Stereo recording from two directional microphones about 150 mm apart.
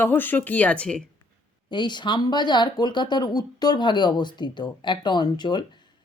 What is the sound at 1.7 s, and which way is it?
Speech, 30° left (ahead or behind).